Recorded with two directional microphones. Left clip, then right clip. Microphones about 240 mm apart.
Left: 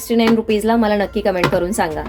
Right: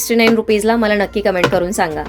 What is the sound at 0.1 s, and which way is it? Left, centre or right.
Speech, right.